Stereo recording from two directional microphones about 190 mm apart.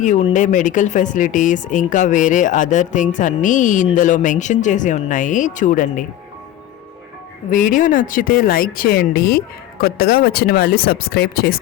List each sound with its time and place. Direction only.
0.0 s speech: 35° left (ahead or behind)
7.5 s speech: 45° left (ahead or behind)